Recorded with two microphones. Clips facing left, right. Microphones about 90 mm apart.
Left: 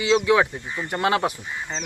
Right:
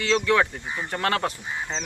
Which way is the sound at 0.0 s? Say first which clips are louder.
Left 3 dB; 10° left (ahead or behind).